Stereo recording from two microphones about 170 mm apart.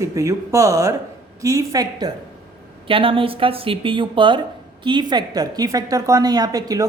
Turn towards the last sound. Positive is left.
turn(degrees=-20)  # may be behind; listen again after turning